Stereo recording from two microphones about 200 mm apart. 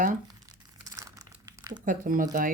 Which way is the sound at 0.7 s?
15° right (ahead or behind).